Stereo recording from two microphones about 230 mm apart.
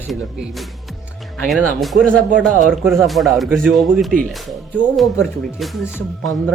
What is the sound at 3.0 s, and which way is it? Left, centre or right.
A man's voice, centre.